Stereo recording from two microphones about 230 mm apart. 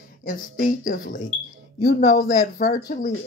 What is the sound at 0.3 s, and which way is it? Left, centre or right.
Speech, left.